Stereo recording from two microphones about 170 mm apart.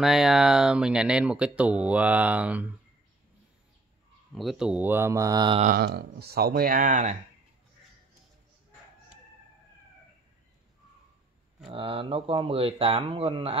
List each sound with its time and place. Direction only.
0.0 s speech: centre (ahead or behind)
4.4 s speech: centre (ahead or behind); by 5.6 s 25° right (ahead or behind)
5.8 s speech: 70° right (ahead or behind); by 7.2 s 50° right (ahead or behind)
11.7 s speech: 30° right (ahead or behind)